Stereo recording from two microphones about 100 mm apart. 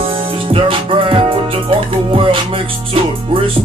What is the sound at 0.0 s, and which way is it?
Music, 65° right (ahead or behind).